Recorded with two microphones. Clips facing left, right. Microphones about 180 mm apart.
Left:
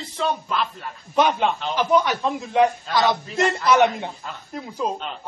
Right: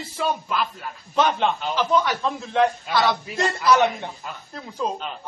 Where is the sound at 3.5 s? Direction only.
20° left (ahead or behind).